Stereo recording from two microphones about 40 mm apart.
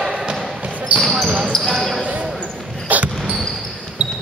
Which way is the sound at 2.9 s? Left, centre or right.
Right.